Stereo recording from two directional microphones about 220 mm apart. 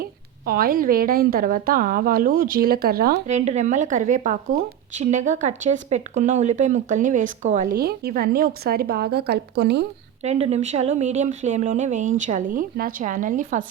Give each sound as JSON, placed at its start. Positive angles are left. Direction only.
{"t": 0.0, "sound": "speech", "side_deg": -45}
{"t": 3.2, "sound": "speech", "side_deg": -30}
{"t": 10.2, "sound": "speech", "side_deg": -30}